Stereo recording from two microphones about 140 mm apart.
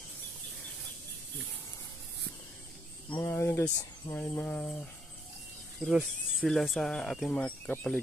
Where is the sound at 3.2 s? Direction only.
15° left (ahead or behind).